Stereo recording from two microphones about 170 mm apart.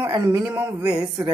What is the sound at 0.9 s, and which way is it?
Speech, 20° right (ahead or behind).